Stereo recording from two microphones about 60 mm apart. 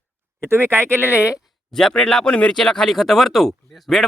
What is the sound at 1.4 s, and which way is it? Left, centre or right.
Speech, centre.